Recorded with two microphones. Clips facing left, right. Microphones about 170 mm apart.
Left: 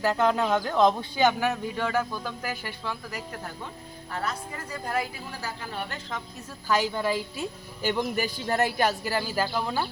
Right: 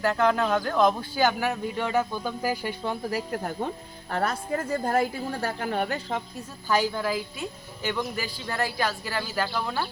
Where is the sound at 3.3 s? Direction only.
50° right (ahead or behind).